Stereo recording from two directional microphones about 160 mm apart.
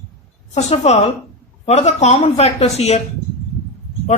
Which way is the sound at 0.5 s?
40° left (ahead or behind).